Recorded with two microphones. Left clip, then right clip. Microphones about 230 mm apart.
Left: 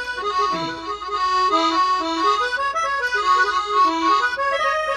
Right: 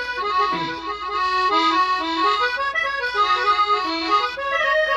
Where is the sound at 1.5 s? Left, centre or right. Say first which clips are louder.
Even; right.